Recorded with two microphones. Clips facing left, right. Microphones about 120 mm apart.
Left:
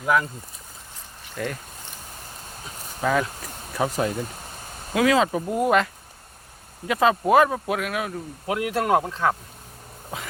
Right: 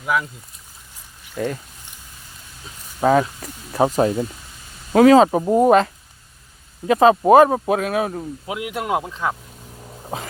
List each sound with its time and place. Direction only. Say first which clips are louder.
0.0 s speech: left 1 dB; 5° right (ahead or behind)
1.4 s speech: right 5 dB; 20° right (ahead or behind)
3.0 s speech: right 7 dB; 35° right (ahead or behind)
8.4 s speech: left 3 dB; 15° right (ahead or behind)
10.1 s speech: right 5 dB; 30° right (ahead or behind)